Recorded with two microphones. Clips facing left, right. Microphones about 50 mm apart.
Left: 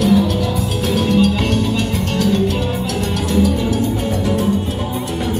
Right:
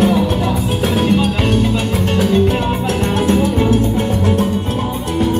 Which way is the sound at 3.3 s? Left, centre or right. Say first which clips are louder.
Right 1 dB; right.